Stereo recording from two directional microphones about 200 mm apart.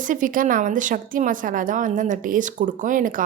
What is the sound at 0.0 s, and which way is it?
A woman's voice, 40° right (ahead or behind).